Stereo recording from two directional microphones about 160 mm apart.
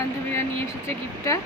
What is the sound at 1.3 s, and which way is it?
Speech, 20° left (ahead or behind).